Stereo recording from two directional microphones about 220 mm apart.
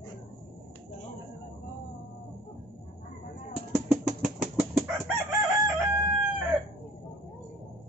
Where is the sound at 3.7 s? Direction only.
5° right (ahead or behind).